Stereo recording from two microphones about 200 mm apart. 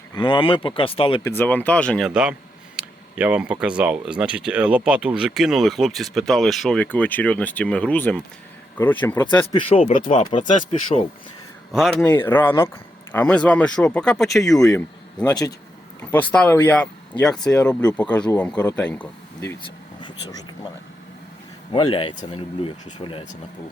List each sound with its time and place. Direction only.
0.1 s speech: 25° left (ahead or behind)
1.4 s speech: 10° left (ahead or behind)
9.6 s speech: 30° left (ahead or behind)
9.9 s speech: 40° left (ahead or behind)
11.7 s speech: centre (ahead or behind)
14.7 s speech: 15° left (ahead or behind)
16.0 s speech: 5° left (ahead or behind)
21.7 s speech: 25° left (ahead or behind)